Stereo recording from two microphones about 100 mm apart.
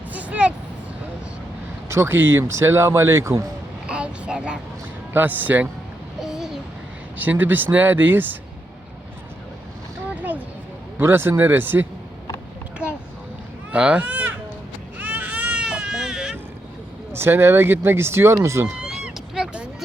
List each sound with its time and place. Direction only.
0.1 s vehicle: 15° right (ahead or behind)
1.9 s speech: 25° right (ahead or behind)
3.8 s a sound: 10° right (ahead or behind)
5.1 s speech: 20° right (ahead or behind)
6.1 s babbling: 5° right (ahead or behind)
7.2 s speech: 15° right (ahead or behind)
10.2 s a sound: 15° right (ahead or behind)
10.9 s speech: 20° right (ahead or behind)
13.7 s a sound: 10° right (ahead or behind)
14.9 s baby cry: 15° right (ahead or behind)
17.1 s speech: 25° right (ahead or behind)
18.8 s a sound: 10° right (ahead or behind)